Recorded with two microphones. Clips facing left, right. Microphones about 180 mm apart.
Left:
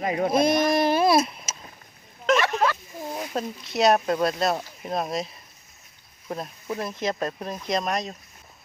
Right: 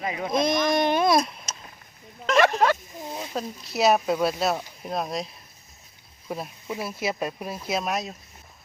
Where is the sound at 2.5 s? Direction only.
45° right (ahead or behind).